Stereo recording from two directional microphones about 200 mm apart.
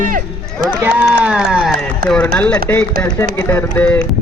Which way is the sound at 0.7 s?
10° right (ahead or behind).